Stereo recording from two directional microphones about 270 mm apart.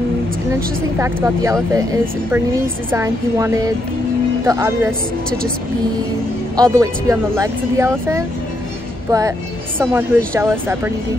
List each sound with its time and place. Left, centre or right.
0.9 s speech: centre
6.5 s speech: centre
9.8 s speech: centre